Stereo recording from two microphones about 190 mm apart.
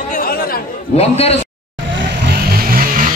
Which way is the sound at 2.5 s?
45° right (ahead or behind).